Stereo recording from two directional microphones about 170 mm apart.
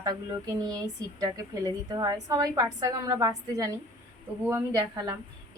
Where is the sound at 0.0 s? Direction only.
20° right (ahead or behind).